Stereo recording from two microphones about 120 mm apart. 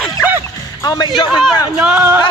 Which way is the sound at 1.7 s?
15° right (ahead or behind).